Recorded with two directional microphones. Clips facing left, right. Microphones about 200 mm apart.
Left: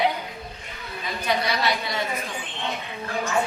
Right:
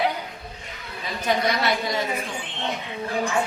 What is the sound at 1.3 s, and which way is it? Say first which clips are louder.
Speech: right 2 dB; 45° right (ahead or behind).